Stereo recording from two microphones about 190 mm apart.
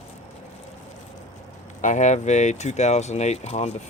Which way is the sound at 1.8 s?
40° left (ahead or behind).